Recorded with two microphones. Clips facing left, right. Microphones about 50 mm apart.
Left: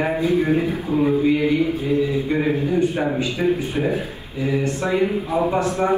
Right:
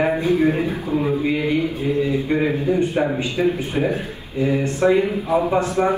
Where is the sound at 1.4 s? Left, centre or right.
Right.